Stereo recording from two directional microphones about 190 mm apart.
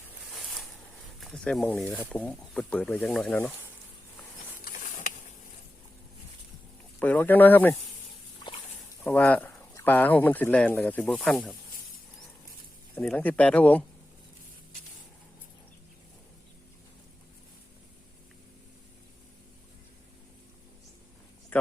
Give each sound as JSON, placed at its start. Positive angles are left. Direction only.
{"t": 0.3, "sound": "a sound", "side_deg": 0}
{"t": 1.2, "sound": "speech", "side_deg": 5}
{"t": 4.6, "sound": "mechanisms", "side_deg": 45}
{"t": 7.0, "sound": "speech", "side_deg": 10}
{"t": 9.0, "sound": "speech", "side_deg": 10}
{"t": 12.9, "sound": "speech", "side_deg": 10}
{"t": 21.5, "sound": "a sound", "side_deg": 10}